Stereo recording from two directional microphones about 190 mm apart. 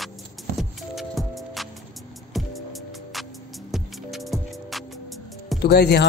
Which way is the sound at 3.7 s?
Centre (ahead or behind).